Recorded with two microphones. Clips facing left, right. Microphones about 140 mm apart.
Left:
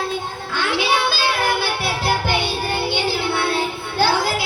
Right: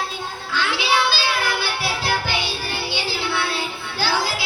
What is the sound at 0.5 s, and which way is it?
Music, 50° left (ahead or behind).